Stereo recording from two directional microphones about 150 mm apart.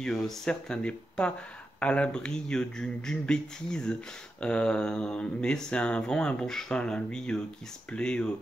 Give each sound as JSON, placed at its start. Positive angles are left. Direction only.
{"t": 0.0, "sound": "speech", "side_deg": 5}